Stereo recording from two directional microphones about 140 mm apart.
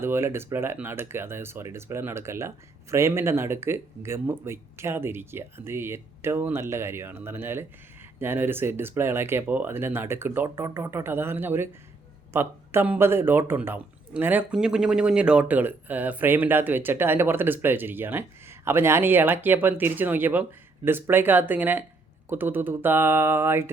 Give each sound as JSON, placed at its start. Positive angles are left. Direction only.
{"t": 0.0, "sound": "a man's voice", "side_deg": -15}